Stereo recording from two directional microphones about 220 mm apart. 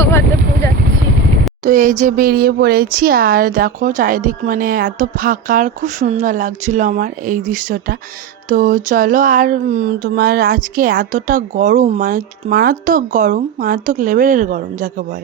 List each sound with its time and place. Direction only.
0.0 s vehicle: 10° left (ahead or behind)
1.6 s speech: 35° right (ahead or behind)